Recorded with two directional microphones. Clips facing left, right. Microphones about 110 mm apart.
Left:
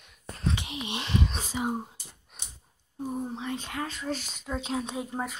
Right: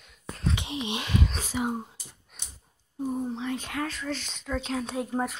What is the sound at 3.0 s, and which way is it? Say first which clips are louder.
Speech: right 3 dB; 5° left (ahead or behind).